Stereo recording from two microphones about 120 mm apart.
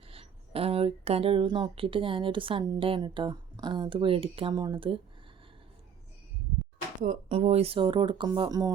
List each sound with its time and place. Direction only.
0.1 s speech: 55° right (ahead or behind)
7.0 s speech: 90° right
7.3 s speech: 60° right (ahead or behind); by 8.7 s 30° right (ahead or behind)